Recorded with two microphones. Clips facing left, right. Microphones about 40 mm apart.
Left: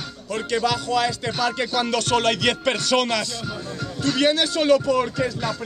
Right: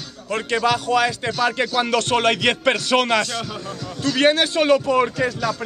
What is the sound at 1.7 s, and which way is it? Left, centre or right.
A man's voice, right.